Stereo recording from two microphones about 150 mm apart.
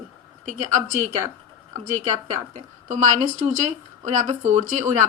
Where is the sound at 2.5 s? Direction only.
55° right (ahead or behind).